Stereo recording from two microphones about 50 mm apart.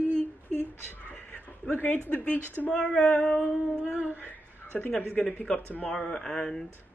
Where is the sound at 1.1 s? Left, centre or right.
Left.